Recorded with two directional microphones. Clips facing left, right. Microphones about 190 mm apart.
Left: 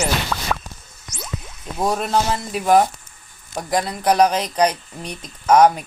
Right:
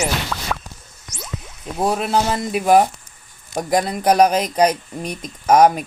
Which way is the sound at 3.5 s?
20° right (ahead or behind).